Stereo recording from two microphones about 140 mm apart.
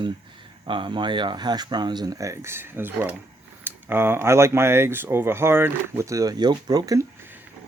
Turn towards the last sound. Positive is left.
turn(degrees=-25)  # may be behind; listen again after turning